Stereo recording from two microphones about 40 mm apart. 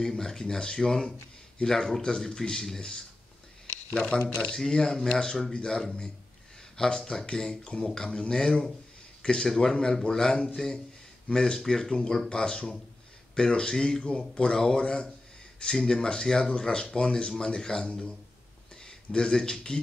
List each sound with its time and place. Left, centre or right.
0.0 s a man's voice: centre
6.8 s a man's voice: centre